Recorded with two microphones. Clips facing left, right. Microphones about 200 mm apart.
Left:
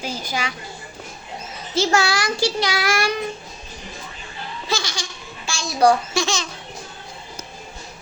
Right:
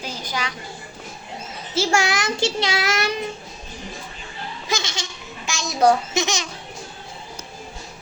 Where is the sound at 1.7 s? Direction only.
10° right (ahead or behind).